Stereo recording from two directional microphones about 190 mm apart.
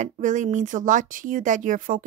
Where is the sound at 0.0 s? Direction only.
40° right (ahead or behind).